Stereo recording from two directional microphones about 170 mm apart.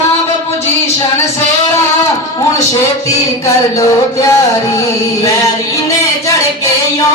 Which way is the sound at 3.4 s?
20° left (ahead or behind).